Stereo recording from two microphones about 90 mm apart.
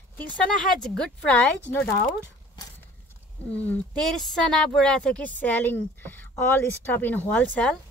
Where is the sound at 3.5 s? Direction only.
15° left (ahead or behind).